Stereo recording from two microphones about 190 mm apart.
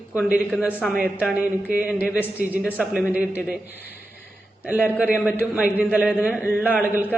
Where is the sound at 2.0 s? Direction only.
10° left (ahead or behind).